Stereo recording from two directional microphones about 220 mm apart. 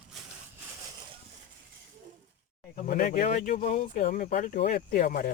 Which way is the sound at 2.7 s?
35° left (ahead or behind).